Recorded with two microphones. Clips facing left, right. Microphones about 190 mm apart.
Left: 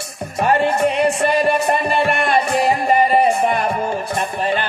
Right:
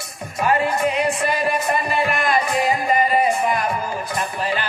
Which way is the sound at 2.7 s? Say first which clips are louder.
Left 4 dB; 30° left (ahead or behind).